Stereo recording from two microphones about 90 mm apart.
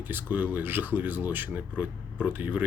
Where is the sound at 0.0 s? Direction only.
20° right (ahead or behind).